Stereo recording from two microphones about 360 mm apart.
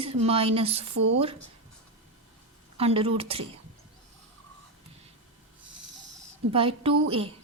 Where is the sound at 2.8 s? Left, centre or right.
Centre.